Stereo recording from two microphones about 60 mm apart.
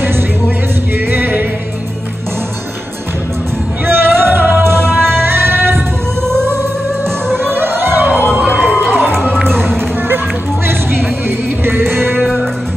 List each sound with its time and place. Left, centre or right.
0.9 s music: right
3.8 s music: right
7.3 s music: right
8.8 s music: centre
9.3 s a sound: centre
11.2 s music: right